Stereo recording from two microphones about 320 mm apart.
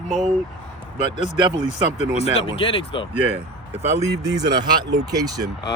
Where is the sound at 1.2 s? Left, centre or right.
Left.